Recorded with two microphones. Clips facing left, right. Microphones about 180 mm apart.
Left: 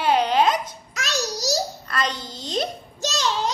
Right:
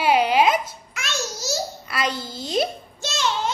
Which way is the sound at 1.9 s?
10° right (ahead or behind).